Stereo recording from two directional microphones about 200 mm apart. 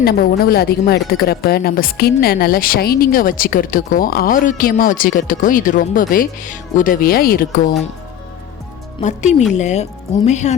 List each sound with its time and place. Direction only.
0.0 s speech: 50° left (ahead or behind)
9.0 s speech: 35° left (ahead or behind)